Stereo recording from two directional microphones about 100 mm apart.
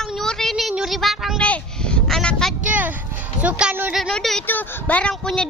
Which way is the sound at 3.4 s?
15° right (ahead or behind).